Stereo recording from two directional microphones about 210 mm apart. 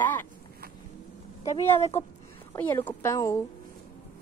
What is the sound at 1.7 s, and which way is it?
Speech, 30° left (ahead or behind).